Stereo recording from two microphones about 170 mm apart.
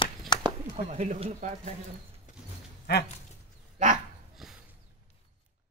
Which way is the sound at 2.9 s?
85° left.